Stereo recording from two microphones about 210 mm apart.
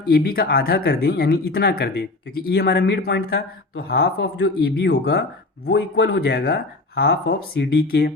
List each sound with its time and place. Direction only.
0.1 s speech: 45° left (ahead or behind)